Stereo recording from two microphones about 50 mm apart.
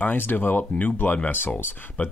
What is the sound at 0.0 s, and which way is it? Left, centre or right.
Speech, left.